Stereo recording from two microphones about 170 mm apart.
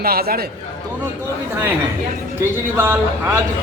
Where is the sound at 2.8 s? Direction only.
15° right (ahead or behind).